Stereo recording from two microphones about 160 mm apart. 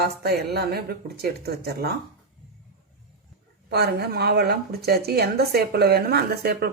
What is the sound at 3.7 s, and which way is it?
A woman's voice, 85° right.